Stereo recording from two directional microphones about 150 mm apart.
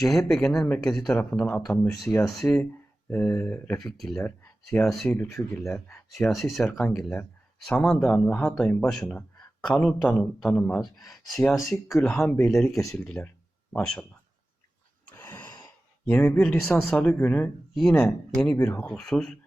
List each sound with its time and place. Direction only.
0.0 s a man's voice: centre (ahead or behind)
2.0 s a man's voice: 5° left (ahead or behind)
5.1 s speech: 15° left (ahead or behind)
6.1 s a man's voice: centre (ahead or behind)
7.0 s a man's voice: 10° left (ahead or behind)
15.0 s a sound: 10° left (ahead or behind)
15.4 s sigh: 25° left (ahead or behind)
16.0 s a man's voice: 10° left (ahead or behind)